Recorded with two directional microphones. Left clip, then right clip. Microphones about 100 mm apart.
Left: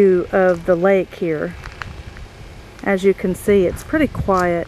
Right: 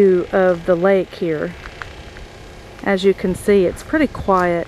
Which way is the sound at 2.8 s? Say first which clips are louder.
Even; 10° right (ahead or behind).